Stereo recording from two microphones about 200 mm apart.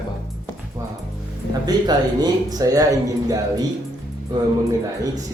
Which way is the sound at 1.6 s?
20° right (ahead or behind).